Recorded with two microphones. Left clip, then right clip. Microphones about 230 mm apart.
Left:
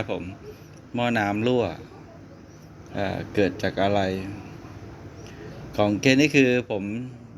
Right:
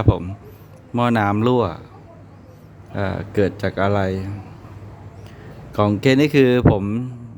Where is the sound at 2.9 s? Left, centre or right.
Right.